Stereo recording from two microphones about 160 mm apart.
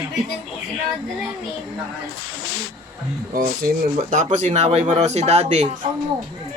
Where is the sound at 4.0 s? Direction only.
45° right (ahead or behind).